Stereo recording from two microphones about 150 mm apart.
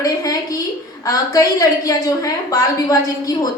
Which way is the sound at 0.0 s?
25° left (ahead or behind).